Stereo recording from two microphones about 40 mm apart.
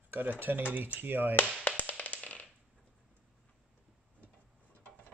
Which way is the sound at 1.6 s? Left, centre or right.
Left.